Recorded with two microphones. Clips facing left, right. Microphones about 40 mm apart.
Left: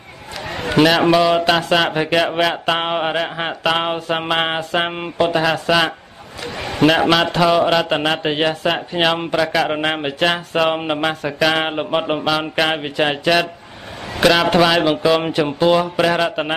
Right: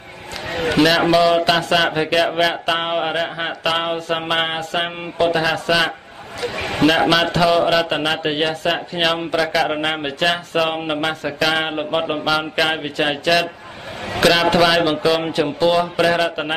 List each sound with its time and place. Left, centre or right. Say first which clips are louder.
0.7 s a man's voice: left 2 dB; centre
6.5 s a man's voice: even; right
7.1 s speech: left 1 dB; centre